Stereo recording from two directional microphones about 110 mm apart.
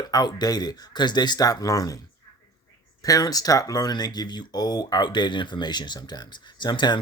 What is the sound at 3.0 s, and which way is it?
Speech, 35° left (ahead or behind).